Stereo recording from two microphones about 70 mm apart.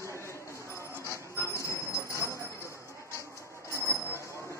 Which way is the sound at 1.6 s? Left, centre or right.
Left.